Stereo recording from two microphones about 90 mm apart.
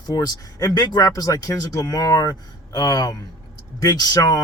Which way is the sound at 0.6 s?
50° left (ahead or behind).